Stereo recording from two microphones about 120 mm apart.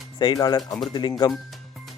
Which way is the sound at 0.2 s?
35° left (ahead or behind).